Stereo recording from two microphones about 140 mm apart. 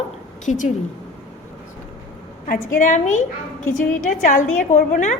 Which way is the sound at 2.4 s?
70° left (ahead or behind).